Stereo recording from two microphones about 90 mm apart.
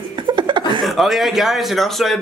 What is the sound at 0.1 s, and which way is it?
Chuckle, 55° right (ahead or behind).